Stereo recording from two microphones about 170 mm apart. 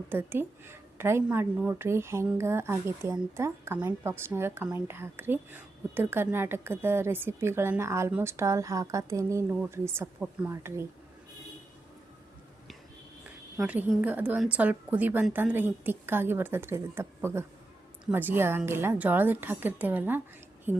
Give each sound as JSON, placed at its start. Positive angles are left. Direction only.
{"t": 0.1, "sound": "a woman's voice", "side_deg": -10}
{"t": 13.6, "sound": "a woman's voice", "side_deg": -10}